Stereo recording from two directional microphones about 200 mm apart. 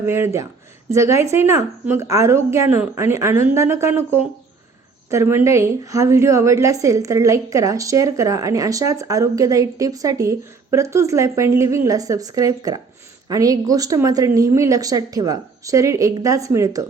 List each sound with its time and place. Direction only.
0.0 s a woman's voice: 10° right (ahead or behind)